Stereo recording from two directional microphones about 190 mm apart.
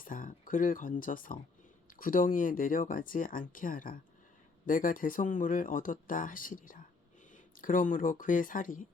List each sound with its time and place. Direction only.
0.0 s speech: 45° left (ahead or behind)